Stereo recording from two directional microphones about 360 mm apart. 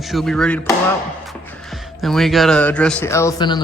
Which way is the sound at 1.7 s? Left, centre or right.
Centre.